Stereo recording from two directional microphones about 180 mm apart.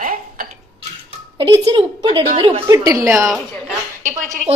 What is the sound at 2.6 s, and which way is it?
Speech, 20° right (ahead or behind).